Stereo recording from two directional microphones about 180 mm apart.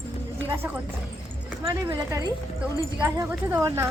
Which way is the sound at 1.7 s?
20° right (ahead or behind).